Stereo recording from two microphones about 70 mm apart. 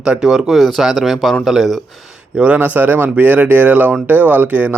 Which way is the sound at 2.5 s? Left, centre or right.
Right.